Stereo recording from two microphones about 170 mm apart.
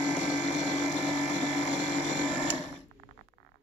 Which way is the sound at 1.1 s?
45° left (ahead or behind).